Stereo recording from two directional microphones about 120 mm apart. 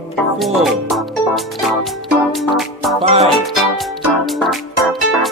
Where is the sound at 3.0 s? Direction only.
65° right (ahead or behind).